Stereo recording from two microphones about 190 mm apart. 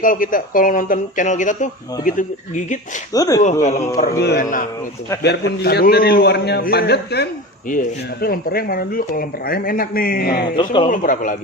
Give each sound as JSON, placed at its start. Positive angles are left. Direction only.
{"t": 0.0, "sound": "speech", "side_deg": 45}
{"t": 3.1, "sound": "speech", "side_deg": 20}
{"t": 3.6, "sound": "speech", "side_deg": 40}
{"t": 5.2, "sound": "a man's voice", "side_deg": 60}
{"t": 7.7, "sound": "speech", "side_deg": 50}
{"t": 10.6, "sound": "speech", "side_deg": 25}
{"t": 10.8, "sound": "speech", "side_deg": 45}